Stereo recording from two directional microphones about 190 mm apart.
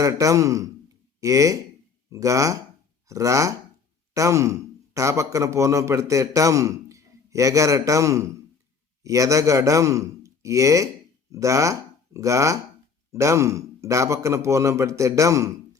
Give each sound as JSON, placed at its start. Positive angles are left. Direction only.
{"t": 0.0, "sound": "a man's voice", "side_deg": -15}